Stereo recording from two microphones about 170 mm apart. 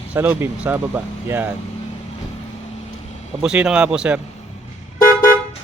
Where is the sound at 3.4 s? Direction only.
5° right (ahead or behind).